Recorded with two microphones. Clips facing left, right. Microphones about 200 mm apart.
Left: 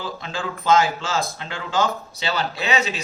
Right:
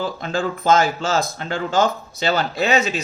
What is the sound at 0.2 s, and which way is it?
Speech, 45° right (ahead or behind).